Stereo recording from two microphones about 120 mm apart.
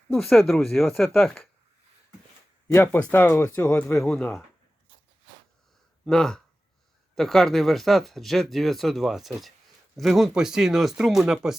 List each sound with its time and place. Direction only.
0.1 s speech: centre (ahead or behind)
2.7 s speech: 20° left (ahead or behind)
3.9 s speech: 5° left (ahead or behind)
6.1 s speech: 5° left (ahead or behind)